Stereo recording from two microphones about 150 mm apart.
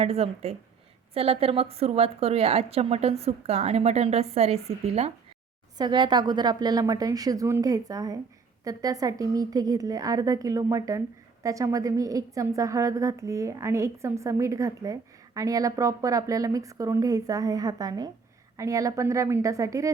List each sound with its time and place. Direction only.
0.0 s speech: 40° right (ahead or behind)
5.7 s a woman's voice: 30° right (ahead or behind)